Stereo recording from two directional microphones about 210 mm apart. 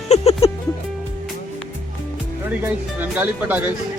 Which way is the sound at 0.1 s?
30° left (ahead or behind).